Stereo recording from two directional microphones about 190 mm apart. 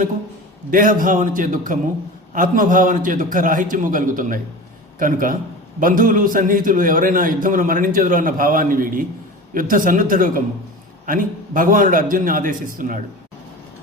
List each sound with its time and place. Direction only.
0.7 s a man's voice: 45° right (ahead or behind)